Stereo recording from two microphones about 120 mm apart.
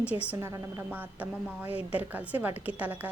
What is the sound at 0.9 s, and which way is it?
A woman's voice, 15° right (ahead or behind).